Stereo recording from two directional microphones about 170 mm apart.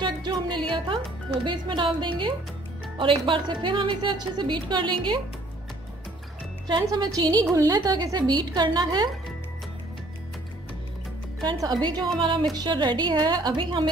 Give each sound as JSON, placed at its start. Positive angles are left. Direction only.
{"t": 0.0, "sound": "music", "side_deg": -25}
{"t": 1.4, "sound": "speech", "side_deg": -30}
{"t": 6.7, "sound": "speech", "side_deg": -20}
{"t": 11.4, "sound": "speech", "side_deg": -25}